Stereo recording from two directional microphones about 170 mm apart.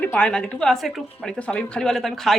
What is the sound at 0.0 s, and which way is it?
A woman's voice, 5° left (ahead or behind).